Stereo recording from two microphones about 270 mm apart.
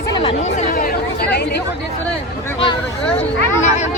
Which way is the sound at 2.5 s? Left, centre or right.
Centre.